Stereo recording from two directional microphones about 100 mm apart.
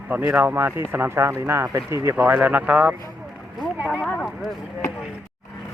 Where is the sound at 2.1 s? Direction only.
15° right (ahead or behind).